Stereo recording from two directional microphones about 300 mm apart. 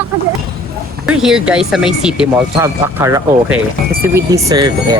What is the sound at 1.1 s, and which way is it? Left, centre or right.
Speech, centre.